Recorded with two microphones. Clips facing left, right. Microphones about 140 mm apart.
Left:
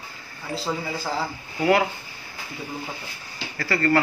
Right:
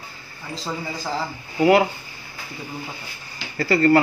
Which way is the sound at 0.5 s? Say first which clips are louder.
Left 2 dB; 5° left (ahead or behind).